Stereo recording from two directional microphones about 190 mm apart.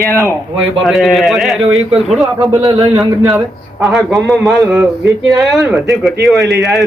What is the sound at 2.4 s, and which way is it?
Speech, 20° right (ahead or behind).